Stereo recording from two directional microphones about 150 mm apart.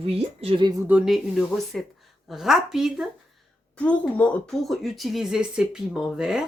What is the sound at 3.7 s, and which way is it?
Speech, 10° left (ahead or behind).